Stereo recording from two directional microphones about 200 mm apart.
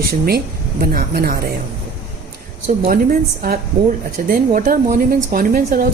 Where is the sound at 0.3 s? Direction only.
50° right (ahead or behind).